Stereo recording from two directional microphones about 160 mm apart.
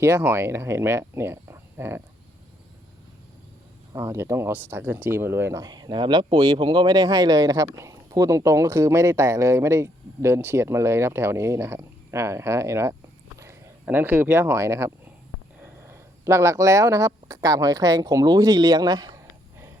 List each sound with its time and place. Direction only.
0.0 s speech: 15° right (ahead or behind)
3.9 s speech: 15° right (ahead or behind)
15.6 s a sound: 15° right (ahead or behind)
17.1 s speech: 20° right (ahead or behind)